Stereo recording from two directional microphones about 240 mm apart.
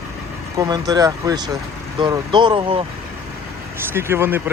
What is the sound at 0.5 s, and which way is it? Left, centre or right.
Speech, centre.